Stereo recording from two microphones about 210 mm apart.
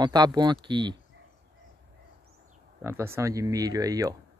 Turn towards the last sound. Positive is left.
turn(degrees=-15)  # may be behind; listen again after turning